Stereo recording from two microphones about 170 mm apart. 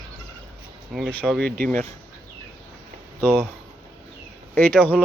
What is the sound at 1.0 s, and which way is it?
Speech, centre (ahead or behind).